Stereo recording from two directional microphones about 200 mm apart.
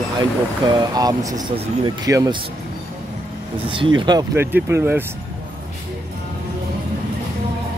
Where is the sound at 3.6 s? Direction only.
25° right (ahead or behind); by 5.0 s 10° right (ahead or behind).